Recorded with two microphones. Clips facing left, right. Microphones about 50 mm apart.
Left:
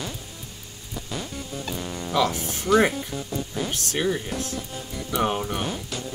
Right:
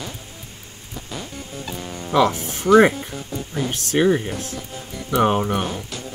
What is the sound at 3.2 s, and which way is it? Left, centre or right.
Music, centre.